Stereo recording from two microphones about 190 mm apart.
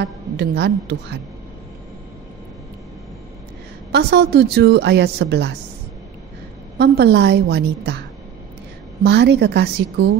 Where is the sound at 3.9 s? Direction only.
60° right (ahead or behind).